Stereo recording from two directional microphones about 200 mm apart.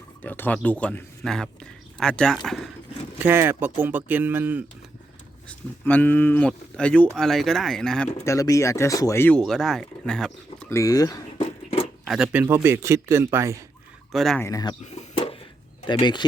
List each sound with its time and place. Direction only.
0.2 s speech: 10° left (ahead or behind)
3.2 s a man's voice: 10° right (ahead or behind)
5.5 s speech: 10° left (ahead or behind)
11.3 s a sound: 30° left (ahead or behind)
12.0 s a man's voice: 5° right (ahead or behind)
14.1 s speech: centre (ahead or behind)
14.4 s speech: 20° left (ahead or behind)
14.8 s a sound: 30° left (ahead or behind)
15.9 s speech: 20° left (ahead or behind)